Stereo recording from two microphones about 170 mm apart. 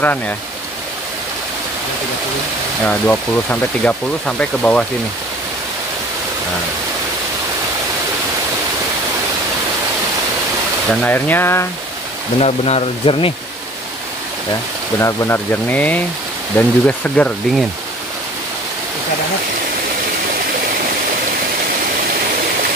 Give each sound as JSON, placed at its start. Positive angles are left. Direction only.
{"t": 2.9, "sound": "speech", "side_deg": 10}
{"t": 10.9, "sound": "speech", "side_deg": 10}
{"t": 12.4, "sound": "speech", "side_deg": 35}
{"t": 15.0, "sound": "speech", "side_deg": 15}